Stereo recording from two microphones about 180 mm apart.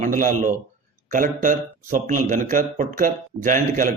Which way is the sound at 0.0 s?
45° right (ahead or behind).